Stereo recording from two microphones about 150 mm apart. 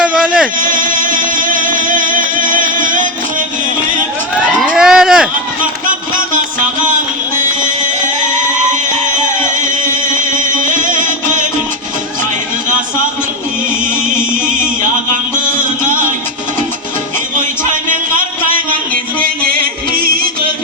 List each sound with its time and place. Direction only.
0.0 s a sound: 5° right (ahead or behind)
0.6 s music: 65° right (ahead or behind)
4.6 s vehicle: 5° right (ahead or behind)
7.3 s music: 60° right (ahead or behind)
9.6 s music: 60° right (ahead or behind)